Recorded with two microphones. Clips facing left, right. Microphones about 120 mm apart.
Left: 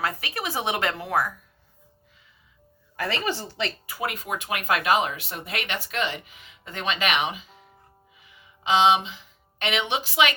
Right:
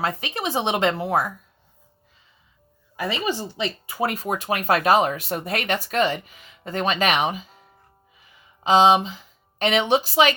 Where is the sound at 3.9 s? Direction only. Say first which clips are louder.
Right 5 dB; 35° right (ahead or behind).